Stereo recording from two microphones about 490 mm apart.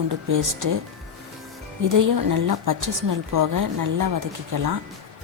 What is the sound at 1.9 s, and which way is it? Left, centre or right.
Speech, right.